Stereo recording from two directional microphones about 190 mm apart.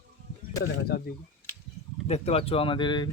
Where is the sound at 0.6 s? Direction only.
55° left (ahead or behind).